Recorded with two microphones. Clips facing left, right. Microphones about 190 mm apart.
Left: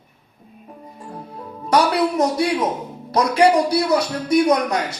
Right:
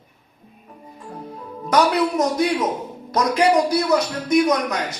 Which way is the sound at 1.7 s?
30° left (ahead or behind).